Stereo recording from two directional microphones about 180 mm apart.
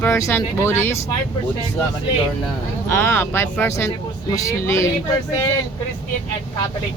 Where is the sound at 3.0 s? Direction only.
10° left (ahead or behind).